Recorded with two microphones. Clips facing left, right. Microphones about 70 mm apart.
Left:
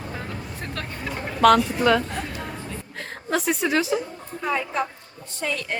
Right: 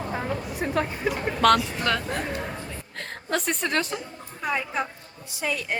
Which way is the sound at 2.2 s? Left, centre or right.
Centre.